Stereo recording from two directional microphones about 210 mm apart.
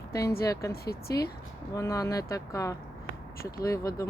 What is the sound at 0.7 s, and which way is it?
Speech, 50° left (ahead or behind).